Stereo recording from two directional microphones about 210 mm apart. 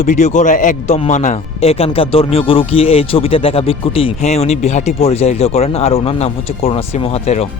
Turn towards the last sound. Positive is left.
turn(degrees=30)  # may be behind; listen again after turning